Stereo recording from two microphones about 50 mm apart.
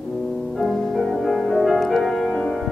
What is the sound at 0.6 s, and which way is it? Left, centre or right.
Music, centre.